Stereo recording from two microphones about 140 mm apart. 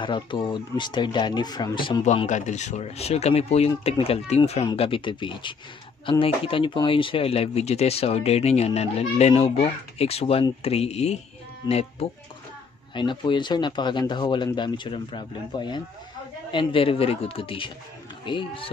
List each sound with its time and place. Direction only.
0.0 s speech: 35° left (ahead or behind)
2.2 s speech: 60° left (ahead or behind)
12.9 s speech: 35° left (ahead or behind)